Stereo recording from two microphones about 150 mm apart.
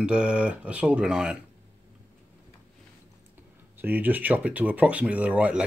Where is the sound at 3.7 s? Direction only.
10° right (ahead or behind).